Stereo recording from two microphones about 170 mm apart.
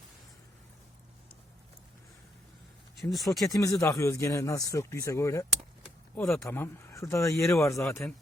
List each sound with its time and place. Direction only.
3.0 s speech: centre (ahead or behind)
3.8 s speech: 15° left (ahead or behind)